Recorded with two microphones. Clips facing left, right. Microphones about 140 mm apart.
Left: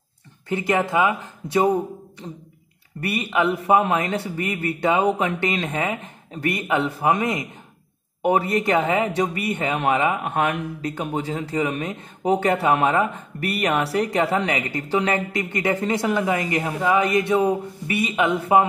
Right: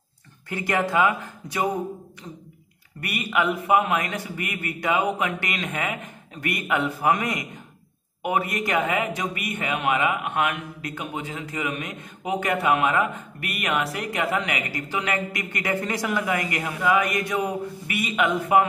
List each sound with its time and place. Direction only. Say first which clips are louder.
0.5 s a man's voice: left 3 dB; 20° left (ahead or behind)